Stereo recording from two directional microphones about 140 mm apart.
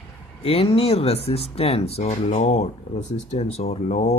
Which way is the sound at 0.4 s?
45° left (ahead or behind).